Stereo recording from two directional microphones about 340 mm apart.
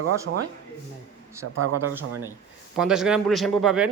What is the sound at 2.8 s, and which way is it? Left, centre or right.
Speech, centre.